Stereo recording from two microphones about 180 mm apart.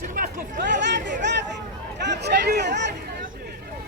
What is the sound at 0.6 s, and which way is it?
Speech, 75° right (ahead or behind).